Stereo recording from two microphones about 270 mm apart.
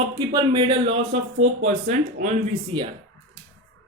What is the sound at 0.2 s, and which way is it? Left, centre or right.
A man's voice, centre.